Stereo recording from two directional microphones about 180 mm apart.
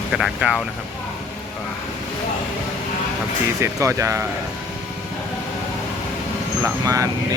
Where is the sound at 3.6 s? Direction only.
15° right (ahead or behind).